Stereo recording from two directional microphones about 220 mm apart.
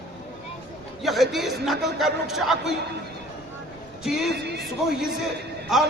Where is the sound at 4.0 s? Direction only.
Centre (ahead or behind).